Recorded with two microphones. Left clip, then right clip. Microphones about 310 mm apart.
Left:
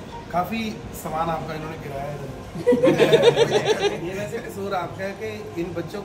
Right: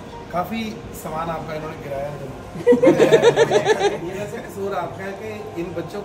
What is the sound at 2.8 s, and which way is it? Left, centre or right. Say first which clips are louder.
Speech: right 2 dB; centre.